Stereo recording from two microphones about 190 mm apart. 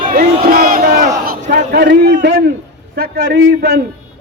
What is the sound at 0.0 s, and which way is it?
Battle cry, 50° right (ahead or behind).